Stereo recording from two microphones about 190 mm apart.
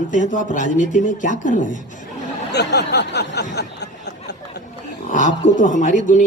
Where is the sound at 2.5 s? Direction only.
60° left (ahead or behind).